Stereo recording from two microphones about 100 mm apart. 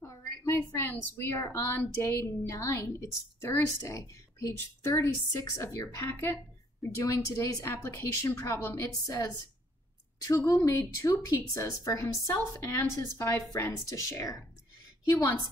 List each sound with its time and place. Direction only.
0.0 s a woman's voice: 30° left (ahead or behind)